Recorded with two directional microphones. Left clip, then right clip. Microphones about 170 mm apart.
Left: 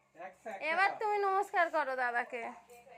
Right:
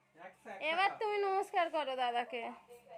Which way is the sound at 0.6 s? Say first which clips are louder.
Left 2 dB; 15° right (ahead or behind).